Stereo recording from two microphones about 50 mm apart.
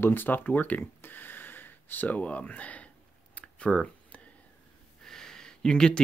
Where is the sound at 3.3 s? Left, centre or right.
Centre.